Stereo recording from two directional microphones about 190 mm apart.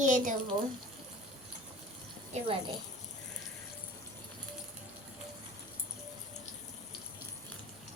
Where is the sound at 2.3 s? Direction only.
30° right (ahead or behind).